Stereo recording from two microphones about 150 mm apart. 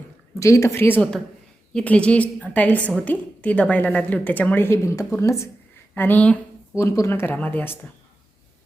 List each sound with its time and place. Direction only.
0.3 s a woman's voice: 20° left (ahead or behind)